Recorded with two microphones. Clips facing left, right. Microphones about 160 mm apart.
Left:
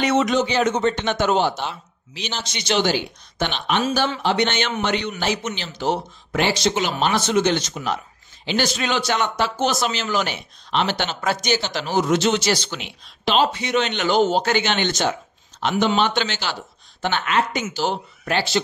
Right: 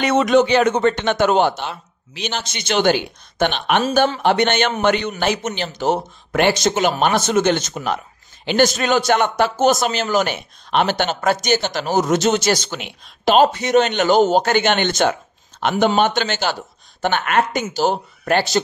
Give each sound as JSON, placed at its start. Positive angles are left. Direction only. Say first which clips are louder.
{"t": 0.0, "sound": "speech", "louder": "right 4 dB", "side_deg": -55}